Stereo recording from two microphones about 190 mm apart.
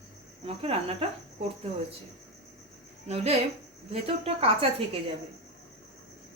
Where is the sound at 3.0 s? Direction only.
35° right (ahead or behind).